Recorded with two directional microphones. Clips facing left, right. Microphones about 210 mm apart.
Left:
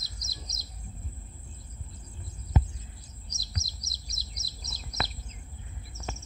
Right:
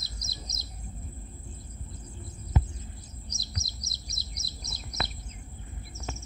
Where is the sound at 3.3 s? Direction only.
60° right (ahead or behind).